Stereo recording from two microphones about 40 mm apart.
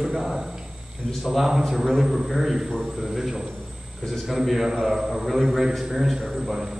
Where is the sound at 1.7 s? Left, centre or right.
Centre.